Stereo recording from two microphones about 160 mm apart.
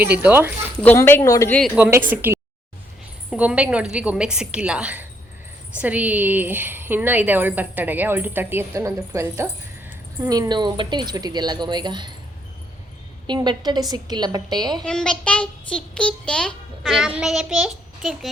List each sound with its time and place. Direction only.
0.0 s speech: 10° right (ahead or behind)
0.8 s speech: 10° left (ahead or behind)
1.6 s speech: 10° right (ahead or behind); by 12.1 s 30° right (ahead or behind)
13.2 s speech: 25° right (ahead or behind)
14.8 s a child's voice: 5° left (ahead or behind)